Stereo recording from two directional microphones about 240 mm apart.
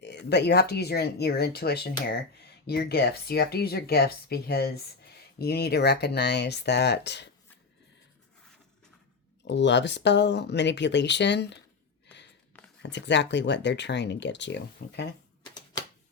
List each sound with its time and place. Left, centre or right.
0.0 s speech: left
9.4 s speech: left
12.8 s speech: left
15.7 s typewriter: centre